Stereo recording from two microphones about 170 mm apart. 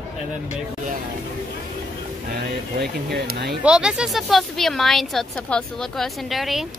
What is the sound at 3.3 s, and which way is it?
Speech, 70° right (ahead or behind).